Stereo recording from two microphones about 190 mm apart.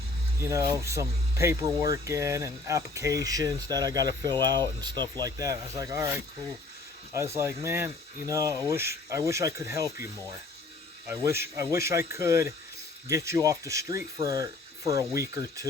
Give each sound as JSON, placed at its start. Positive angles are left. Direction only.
{"t": 0.3, "sound": "speech", "side_deg": -15}
{"t": 7.1, "sound": "speech", "side_deg": -15}